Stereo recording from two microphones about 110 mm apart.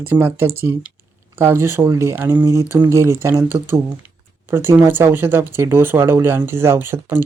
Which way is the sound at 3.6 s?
20° right (ahead or behind).